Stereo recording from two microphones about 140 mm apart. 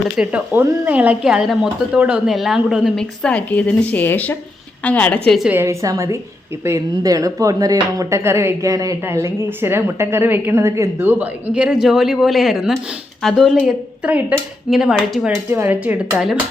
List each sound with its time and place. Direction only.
0.2 s a woman's voice: 10° right (ahead or behind)
5.5 s a woman's voice: 20° right (ahead or behind)
15.4 s a woman's voice: 15° right (ahead or behind)